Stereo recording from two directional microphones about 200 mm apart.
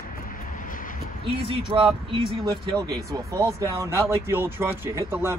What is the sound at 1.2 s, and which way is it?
Speech, 25° right (ahead or behind).